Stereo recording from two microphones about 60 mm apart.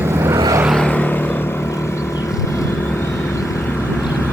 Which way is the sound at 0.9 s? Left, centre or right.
Left.